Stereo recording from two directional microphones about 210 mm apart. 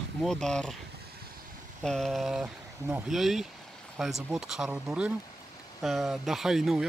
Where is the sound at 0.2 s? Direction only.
Centre (ahead or behind).